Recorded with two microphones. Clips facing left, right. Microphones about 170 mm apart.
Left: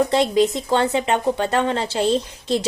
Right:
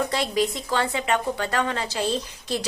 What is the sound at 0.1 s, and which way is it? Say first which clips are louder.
A woman's voice: left 7 dB; 25° left (ahead or behind).